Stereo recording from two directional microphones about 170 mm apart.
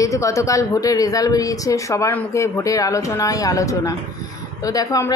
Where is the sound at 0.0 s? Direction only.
20° left (ahead or behind).